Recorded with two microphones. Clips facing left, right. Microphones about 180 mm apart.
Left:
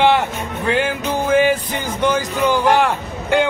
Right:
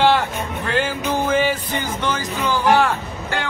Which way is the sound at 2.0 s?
15° left (ahead or behind).